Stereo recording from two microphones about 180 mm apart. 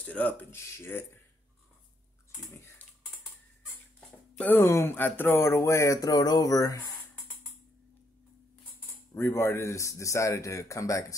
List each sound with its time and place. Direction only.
0.0 s speech: 5° left (ahead or behind)
2.5 s a sound: 15° left (ahead or behind)
4.4 s speech: 10° left (ahead or behind)
9.1 s speech: 15° left (ahead or behind)